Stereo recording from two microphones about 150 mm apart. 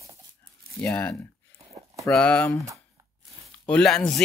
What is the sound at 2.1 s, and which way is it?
Speech, 10° left (ahead or behind).